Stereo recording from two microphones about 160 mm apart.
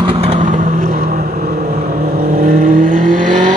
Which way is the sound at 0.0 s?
35° right (ahead or behind).